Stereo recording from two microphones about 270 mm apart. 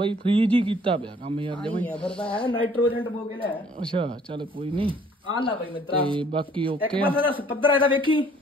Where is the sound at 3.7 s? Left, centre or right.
Centre.